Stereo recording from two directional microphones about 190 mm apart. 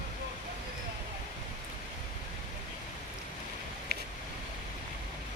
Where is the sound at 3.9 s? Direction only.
55° right (ahead or behind).